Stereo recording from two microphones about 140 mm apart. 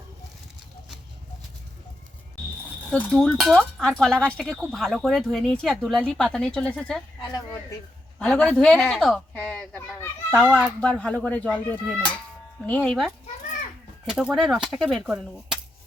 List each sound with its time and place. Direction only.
2.9 s speech: 5° left (ahead or behind)
7.3 s speech: 25° left (ahead or behind)
8.2 s speech: 5° left (ahead or behind)